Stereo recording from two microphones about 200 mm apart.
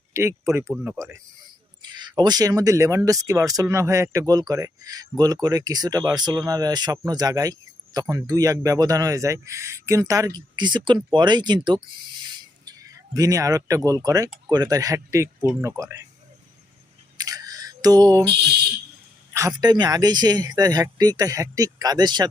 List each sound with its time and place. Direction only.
0.1 s speech: 15° right (ahead or behind)
17.2 s a sound: 20° right (ahead or behind)
18.3 s speech: 55° right (ahead or behind)
19.3 s speech: 15° right (ahead or behind)